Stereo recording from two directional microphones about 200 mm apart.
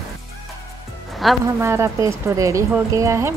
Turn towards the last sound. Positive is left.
turn(degrees=-15)  # may be behind; listen again after turning